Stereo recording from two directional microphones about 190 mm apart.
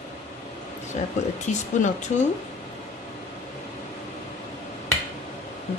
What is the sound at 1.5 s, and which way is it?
Speech, 40° left (ahead or behind).